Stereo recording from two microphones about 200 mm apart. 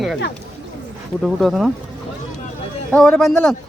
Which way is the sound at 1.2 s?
Centre (ahead or behind).